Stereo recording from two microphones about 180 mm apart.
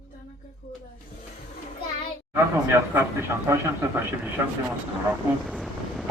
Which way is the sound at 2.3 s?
15° right (ahead or behind).